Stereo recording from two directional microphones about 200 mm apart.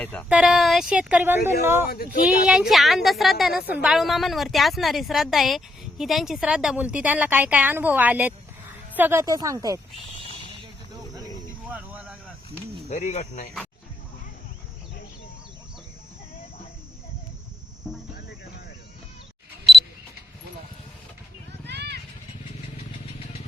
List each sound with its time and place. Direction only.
0.0 s speech: 5° left (ahead or behind)
0.3 s a woman's voice: 5° right (ahead or behind)
11.7 s a sound: 5° right (ahead or behind)
12.9 s speech: 35° left (ahead or behind)
17.8 s cricket: centre (ahead or behind)
21.7 s vehicle: 55° right (ahead or behind)